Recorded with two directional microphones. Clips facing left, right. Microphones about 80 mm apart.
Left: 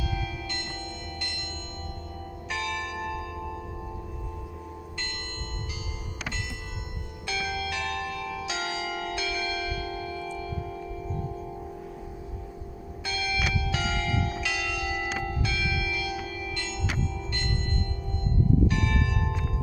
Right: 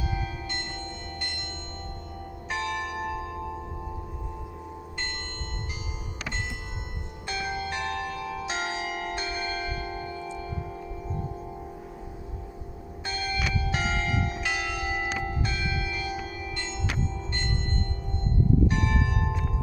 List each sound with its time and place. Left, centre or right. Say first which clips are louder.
0.0 s bell: even; right
2.5 s church bell: right 2 dB; right
7.3 s church bell: even; right
13.1 s church bell: left 1 dB; right
18.7 s church bell: right 1 dB; right